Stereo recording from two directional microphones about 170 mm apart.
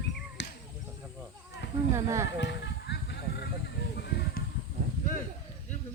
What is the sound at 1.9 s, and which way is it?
Speech, 15° right (ahead or behind).